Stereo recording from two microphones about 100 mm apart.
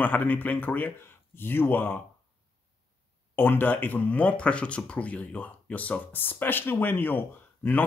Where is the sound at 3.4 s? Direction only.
20° left (ahead or behind).